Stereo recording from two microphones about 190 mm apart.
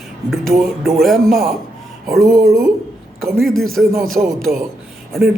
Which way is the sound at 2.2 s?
15° right (ahead or behind).